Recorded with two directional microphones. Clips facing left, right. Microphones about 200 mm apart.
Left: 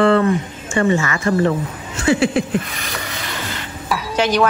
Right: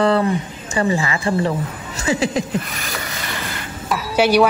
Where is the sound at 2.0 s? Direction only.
40° right (ahead or behind).